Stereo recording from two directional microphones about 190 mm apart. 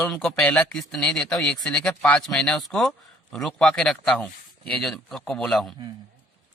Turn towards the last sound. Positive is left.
turn(degrees=5)  # may be behind; listen again after turning